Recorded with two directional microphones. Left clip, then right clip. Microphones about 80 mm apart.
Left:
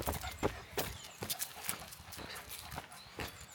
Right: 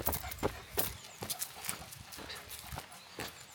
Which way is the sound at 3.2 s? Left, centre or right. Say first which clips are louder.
Right 1 dB; centre.